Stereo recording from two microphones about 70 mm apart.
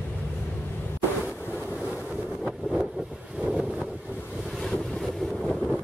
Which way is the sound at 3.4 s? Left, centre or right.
Centre.